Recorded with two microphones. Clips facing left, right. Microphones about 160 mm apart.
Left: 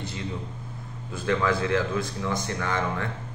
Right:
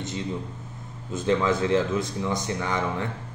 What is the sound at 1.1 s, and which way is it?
Speech, 20° right (ahead or behind).